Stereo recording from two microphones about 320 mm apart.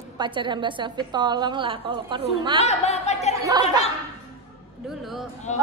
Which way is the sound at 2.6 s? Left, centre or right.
Left.